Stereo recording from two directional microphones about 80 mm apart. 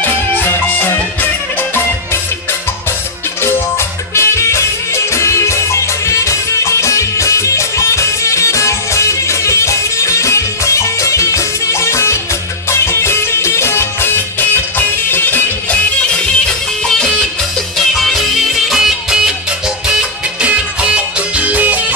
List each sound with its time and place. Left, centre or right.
0.0 s music: left
4.1 s music: left
17.7 s music: centre